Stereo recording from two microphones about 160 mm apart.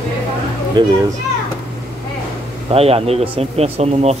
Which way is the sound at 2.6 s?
40° right (ahead or behind).